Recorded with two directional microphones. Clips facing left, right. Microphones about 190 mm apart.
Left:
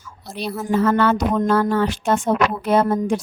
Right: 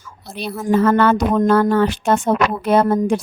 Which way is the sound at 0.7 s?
55° right (ahead or behind).